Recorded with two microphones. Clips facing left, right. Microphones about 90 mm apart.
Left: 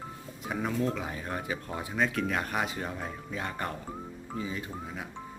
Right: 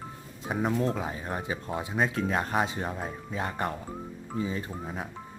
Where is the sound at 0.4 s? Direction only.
25° right (ahead or behind).